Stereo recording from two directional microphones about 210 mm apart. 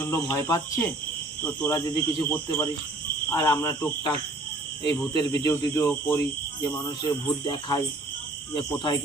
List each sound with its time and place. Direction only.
0.0 s speech: 15° left (ahead or behind)
5.4 s speech: 15° left (ahead or behind)